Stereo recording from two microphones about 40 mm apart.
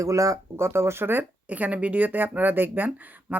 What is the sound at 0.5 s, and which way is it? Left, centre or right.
Speech, right.